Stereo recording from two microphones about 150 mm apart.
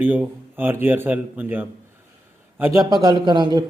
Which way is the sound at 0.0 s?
10° right (ahead or behind).